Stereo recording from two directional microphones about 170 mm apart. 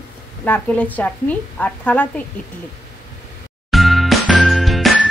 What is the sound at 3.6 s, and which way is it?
Music, centre (ahead or behind).